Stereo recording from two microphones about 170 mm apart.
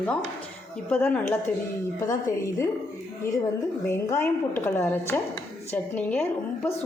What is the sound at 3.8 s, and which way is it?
A woman's voice, 15° left (ahead or behind).